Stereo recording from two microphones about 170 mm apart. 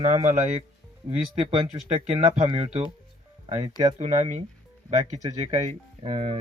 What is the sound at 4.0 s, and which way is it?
Speech, 40° right (ahead or behind).